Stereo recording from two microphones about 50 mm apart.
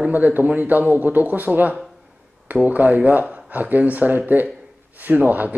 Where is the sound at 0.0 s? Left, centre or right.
Right.